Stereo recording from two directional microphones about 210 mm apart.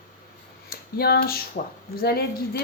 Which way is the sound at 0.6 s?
50° left (ahead or behind).